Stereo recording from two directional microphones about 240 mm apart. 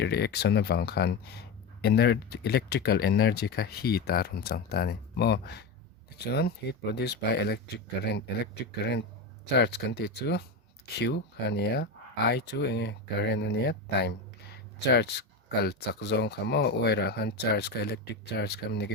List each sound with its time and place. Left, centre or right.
0.0 s speech: left
8.6 s speech: left